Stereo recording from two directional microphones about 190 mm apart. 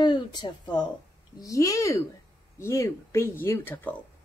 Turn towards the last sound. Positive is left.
turn(degrees=10)  # may be behind; listen again after turning